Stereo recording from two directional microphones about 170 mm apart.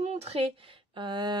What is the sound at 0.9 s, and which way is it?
Speech, 30° right (ahead or behind).